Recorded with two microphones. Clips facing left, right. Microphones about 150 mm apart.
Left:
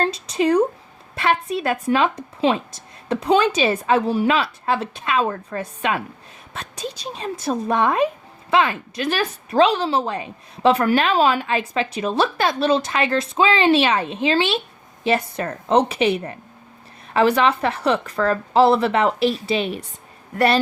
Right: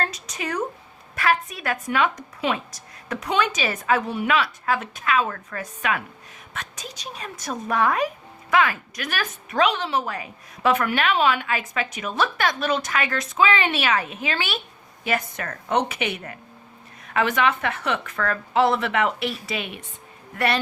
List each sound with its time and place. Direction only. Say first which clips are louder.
0.0 s a woman's voice: left 9 dB; 30° left (ahead or behind)